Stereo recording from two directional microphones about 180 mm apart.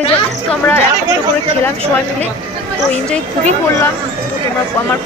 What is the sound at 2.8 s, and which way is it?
Speech, 5° left (ahead or behind).